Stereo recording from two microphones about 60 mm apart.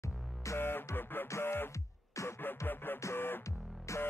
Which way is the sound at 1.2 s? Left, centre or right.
Left.